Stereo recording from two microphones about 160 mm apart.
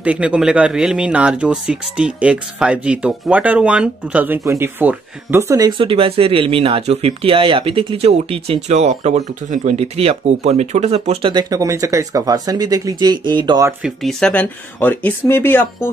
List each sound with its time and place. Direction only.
0.0 s speech: 10° right (ahead or behind)
5.8 s speech: 35° right (ahead or behind)
11.3 s speech: 20° right (ahead or behind)
13.8 s speech: 5° left (ahead or behind)